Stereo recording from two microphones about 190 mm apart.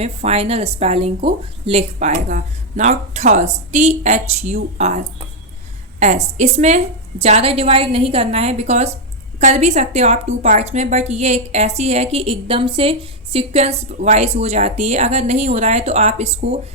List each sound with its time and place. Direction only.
0.0 s a woman's voice: 35° right (ahead or behind)
6.3 s a woman's voice: 35° right (ahead or behind)